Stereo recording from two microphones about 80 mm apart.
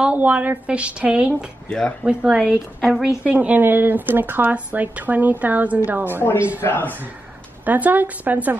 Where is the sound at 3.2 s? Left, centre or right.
Centre.